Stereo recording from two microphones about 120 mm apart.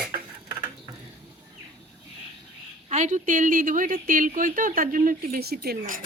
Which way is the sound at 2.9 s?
90° right.